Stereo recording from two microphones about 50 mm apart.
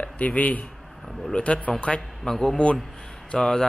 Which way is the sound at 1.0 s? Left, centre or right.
Centre.